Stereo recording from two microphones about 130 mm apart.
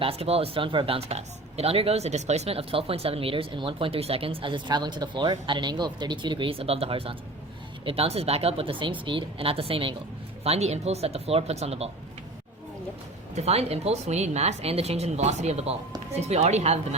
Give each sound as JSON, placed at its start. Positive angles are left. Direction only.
{"t": 0.0, "sound": "speech", "side_deg": -50}
{"t": 13.3, "sound": "a woman's voice", "side_deg": -50}